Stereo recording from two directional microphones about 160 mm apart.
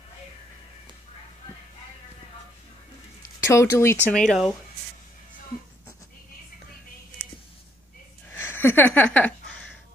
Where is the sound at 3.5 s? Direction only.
15° left (ahead or behind).